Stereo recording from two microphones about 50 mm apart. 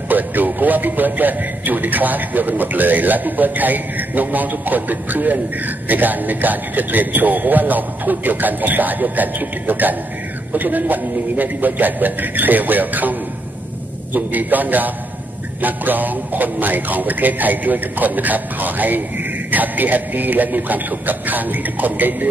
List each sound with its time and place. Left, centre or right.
0.1 s a man's voice: right